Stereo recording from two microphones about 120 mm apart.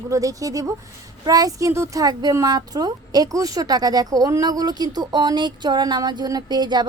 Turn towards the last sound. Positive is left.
turn(degrees=-35)  # may be behind; listen again after turning